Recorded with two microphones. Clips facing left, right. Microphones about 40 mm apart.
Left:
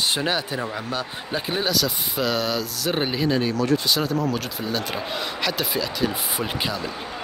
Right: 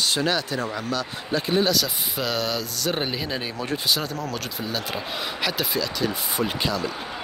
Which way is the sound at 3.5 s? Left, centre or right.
Right.